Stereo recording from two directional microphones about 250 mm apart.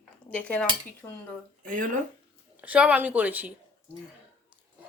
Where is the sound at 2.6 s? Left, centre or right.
Centre.